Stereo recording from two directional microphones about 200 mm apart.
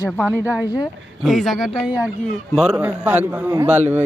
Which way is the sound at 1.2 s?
Centre (ahead or behind).